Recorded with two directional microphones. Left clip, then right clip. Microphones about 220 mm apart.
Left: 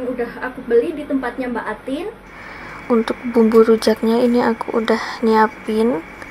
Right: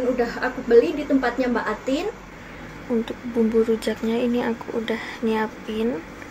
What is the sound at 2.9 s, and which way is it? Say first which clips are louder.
Speech: left 8 dB; 20° left (ahead or behind).